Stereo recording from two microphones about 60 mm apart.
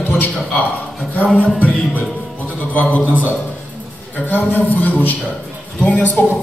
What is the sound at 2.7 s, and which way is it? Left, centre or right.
A man's voice, left.